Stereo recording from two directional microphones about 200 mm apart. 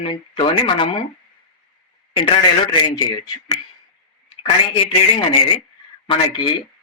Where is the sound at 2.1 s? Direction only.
25° left (ahead or behind).